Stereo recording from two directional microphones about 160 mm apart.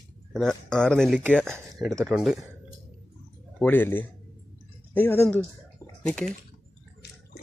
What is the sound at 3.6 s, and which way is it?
Speech, 10° left (ahead or behind).